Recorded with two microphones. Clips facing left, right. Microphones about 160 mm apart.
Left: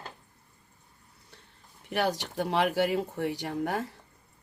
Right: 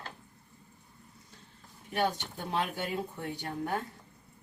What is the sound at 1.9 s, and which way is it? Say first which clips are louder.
Speech: left 3 dB; 85° left.